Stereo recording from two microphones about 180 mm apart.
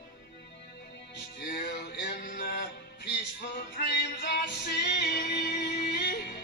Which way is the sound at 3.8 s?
65° left (ahead or behind).